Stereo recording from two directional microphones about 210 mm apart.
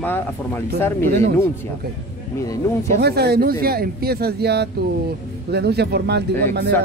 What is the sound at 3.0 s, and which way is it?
Speech, 50° right (ahead or behind).